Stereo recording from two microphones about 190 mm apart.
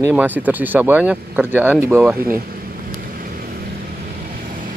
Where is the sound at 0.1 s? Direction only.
10° right (ahead or behind).